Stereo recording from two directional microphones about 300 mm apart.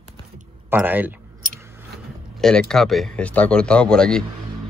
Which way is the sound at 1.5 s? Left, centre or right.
Centre.